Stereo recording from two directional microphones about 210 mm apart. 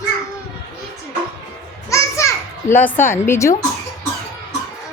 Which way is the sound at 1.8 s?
15° left (ahead or behind).